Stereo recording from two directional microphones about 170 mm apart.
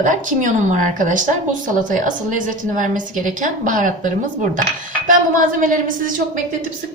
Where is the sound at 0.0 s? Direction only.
50° right (ahead or behind).